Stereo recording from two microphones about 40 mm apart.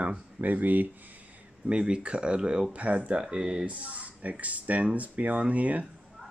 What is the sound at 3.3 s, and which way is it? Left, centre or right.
Speech, right.